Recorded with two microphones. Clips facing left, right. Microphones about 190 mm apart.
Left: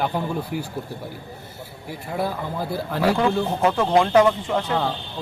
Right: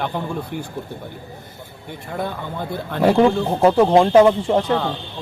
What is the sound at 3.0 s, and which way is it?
Speech, 25° right (ahead or behind).